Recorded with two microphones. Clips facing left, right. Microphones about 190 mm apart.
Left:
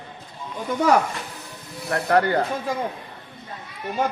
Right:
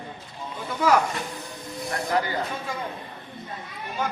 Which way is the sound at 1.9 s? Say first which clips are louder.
Left 6 dB; 65° left (ahead or behind).